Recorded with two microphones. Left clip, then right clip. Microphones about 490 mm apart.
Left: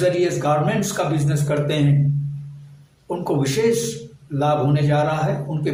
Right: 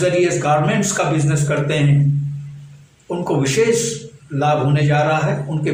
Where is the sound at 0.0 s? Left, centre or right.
Left.